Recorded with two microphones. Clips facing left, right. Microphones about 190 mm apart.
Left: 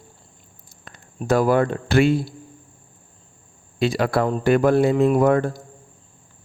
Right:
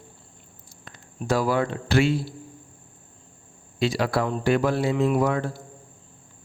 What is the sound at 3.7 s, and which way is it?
A man's voice, 55° left (ahead or behind).